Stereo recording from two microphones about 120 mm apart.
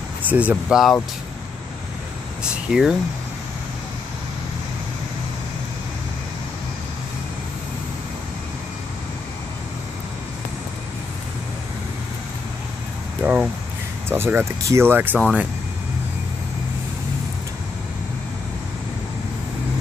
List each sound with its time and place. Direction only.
0.2 s speech: 15° right (ahead or behind)
2.4 s speech: 5° right (ahead or behind)
13.2 s speech: 10° right (ahead or behind)